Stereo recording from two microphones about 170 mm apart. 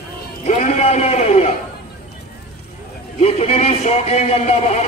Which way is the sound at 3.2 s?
35° left (ahead or behind).